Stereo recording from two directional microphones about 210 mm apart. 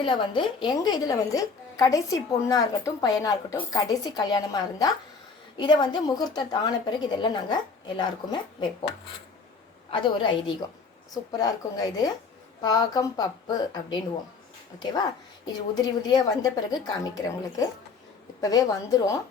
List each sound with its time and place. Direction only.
0.0 s a woman's voice: 25° left (ahead or behind)
9.9 s a woman's voice: 25° left (ahead or behind)
15.7 s a woman's voice: 20° left (ahead or behind)